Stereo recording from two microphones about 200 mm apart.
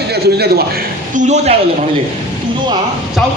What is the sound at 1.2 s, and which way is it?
Speech, 35° right (ahead or behind).